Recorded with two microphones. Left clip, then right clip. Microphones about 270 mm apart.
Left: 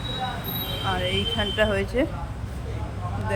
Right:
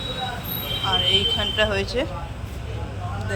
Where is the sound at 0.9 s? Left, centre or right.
Centre.